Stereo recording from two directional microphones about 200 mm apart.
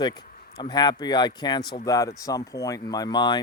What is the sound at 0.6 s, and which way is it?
Speech, 20° left (ahead or behind).